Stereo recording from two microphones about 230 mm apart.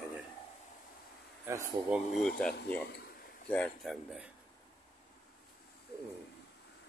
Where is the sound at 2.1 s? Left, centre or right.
Centre.